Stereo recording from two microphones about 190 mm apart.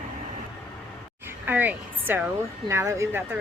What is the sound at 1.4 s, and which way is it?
Speech, 10° right (ahead or behind).